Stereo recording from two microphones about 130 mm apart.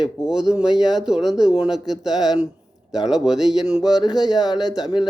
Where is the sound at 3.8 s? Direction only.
30° left (ahead or behind).